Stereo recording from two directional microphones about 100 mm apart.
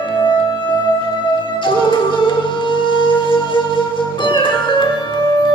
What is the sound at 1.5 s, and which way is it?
Music, 55° left (ahead or behind).